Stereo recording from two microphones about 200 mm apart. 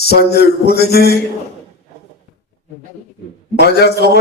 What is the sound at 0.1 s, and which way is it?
A man's voice, 55° left (ahead or behind).